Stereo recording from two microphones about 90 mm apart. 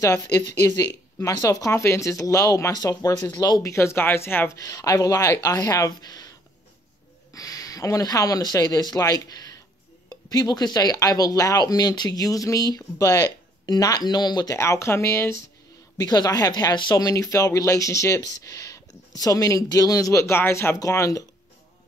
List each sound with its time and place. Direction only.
0.0 s speech: 35° left (ahead or behind)
3.7 s speech: 30° left (ahead or behind)
4.6 s speech: 40° left (ahead or behind)
7.3 s speech: 40° left (ahead or behind)
14.5 s speech: 35° left (ahead or behind)
16.0 s speech: 45° left (ahead or behind)
16.9 s speech: 40° left (ahead or behind)